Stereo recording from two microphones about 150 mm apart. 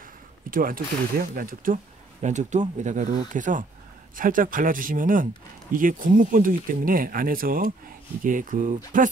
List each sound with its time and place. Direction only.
0.5 s speech: 70° right (ahead or behind)
2.2 s speech: 50° right (ahead or behind)